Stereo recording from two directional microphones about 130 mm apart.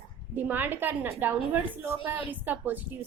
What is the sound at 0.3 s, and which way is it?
A woman's voice, 15° right (ahead or behind).